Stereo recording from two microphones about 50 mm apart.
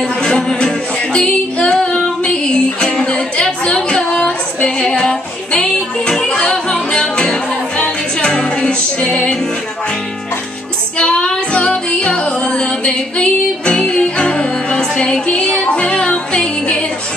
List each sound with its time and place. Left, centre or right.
0.0 s music: centre
11.0 s music: left